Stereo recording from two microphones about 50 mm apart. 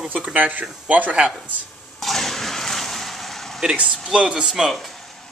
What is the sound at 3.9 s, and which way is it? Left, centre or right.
Speech, centre.